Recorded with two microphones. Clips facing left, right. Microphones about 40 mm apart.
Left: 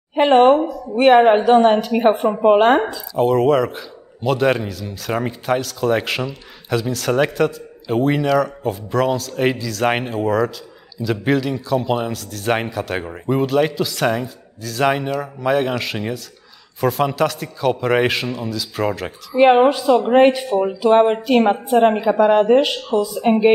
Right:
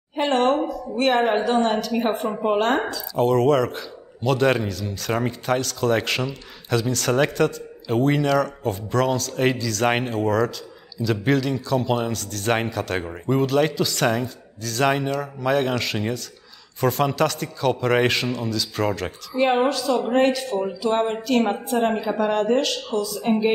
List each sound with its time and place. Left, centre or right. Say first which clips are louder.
0.1 s a woman's voice: left 8 dB; left
0.6 s a woman's voice: left 3 dB; centre
0.9 s a woman's voice: left 8 dB; left
3.2 s a man's voice: left 3 dB; centre
19.3 s a woman's voice: left 8 dB; left